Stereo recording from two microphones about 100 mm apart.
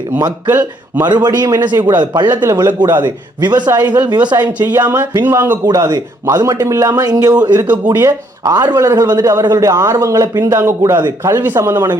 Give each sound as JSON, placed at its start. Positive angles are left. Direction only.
{"t": 0.4, "sound": "a man's voice", "side_deg": -20}
{"t": 1.0, "sound": "a man's voice", "side_deg": -45}
{"t": 2.2, "sound": "a man's voice", "side_deg": -25}
{"t": 3.0, "sound": "a man's voice", "side_deg": -45}
{"t": 3.8, "sound": "speech", "side_deg": -15}
{"t": 4.1, "sound": "a man's voice", "side_deg": -45}
{"t": 4.8, "sound": "a man's voice", "side_deg": -20}
{"t": 5.6, "sound": "a man's voice", "side_deg": -35}
{"t": 10.9, "sound": "a man's voice", "side_deg": -45}
{"t": 11.3, "sound": "a man's voice", "side_deg": -20}